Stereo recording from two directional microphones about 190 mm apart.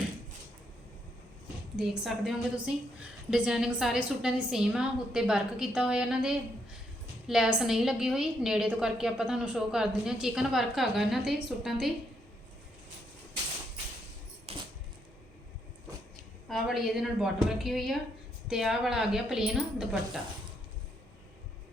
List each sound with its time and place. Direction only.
1.7 s a woman's voice: 5° right (ahead or behind)
14.5 s coin: 30° right (ahead or behind)
16.5 s a woman's voice: centre (ahead or behind)